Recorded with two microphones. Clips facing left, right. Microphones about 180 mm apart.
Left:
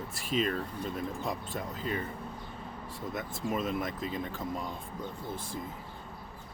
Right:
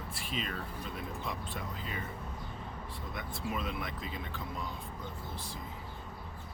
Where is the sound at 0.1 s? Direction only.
45° left (ahead or behind).